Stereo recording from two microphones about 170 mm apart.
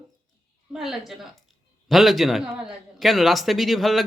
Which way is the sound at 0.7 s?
Centre (ahead or behind).